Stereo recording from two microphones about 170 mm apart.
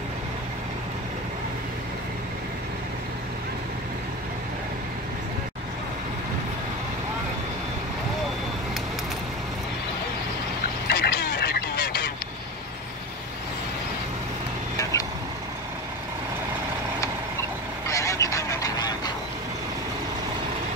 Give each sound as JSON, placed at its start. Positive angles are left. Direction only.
{"t": 10.9, "sound": "a sound", "side_deg": 70}
{"t": 14.8, "sound": "vehicle", "side_deg": 20}
{"t": 17.8, "sound": "goose", "side_deg": 20}